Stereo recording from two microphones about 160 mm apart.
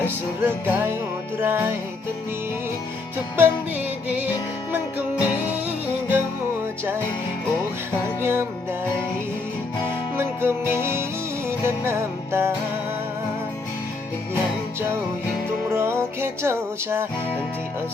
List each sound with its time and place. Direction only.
0.1 s music: 15° right (ahead or behind)
3.3 s music: 10° right (ahead or behind)
8.2 s music: 15° right (ahead or behind)
10.2 s music: 15° right (ahead or behind)
15.7 s music: 15° right (ahead or behind)